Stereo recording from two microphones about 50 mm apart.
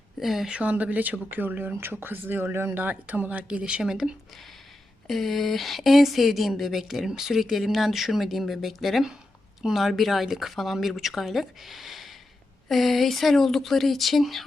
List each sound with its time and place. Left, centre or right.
0.2 s speech: centre
0.4 s speech: right
2.8 s speech: right
3.8 s speech: centre
5.0 s speech: centre